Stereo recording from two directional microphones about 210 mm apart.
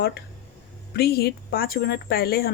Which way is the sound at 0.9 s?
50° left (ahead or behind).